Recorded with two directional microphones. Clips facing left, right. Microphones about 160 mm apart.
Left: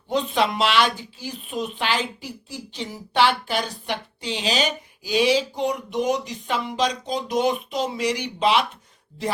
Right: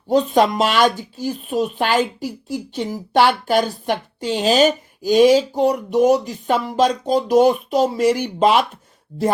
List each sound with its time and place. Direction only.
0.1 s speech: 45° right (ahead or behind)